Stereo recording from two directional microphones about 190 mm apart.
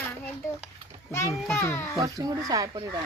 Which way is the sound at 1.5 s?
10° left (ahead or behind).